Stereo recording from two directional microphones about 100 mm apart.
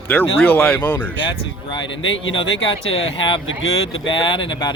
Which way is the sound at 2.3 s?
60° left (ahead or behind).